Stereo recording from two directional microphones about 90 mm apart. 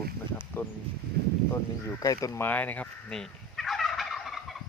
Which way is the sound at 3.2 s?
5° left (ahead or behind).